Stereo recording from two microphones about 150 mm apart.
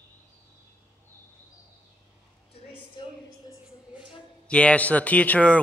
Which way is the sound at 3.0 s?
30° left (ahead or behind).